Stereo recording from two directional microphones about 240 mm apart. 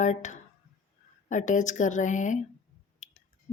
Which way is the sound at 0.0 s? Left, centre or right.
Left.